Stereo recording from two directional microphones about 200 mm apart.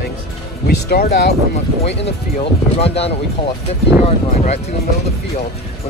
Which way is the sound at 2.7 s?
30° left (ahead or behind).